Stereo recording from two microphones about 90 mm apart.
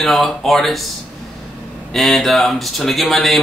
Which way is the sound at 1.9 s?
Centre (ahead or behind).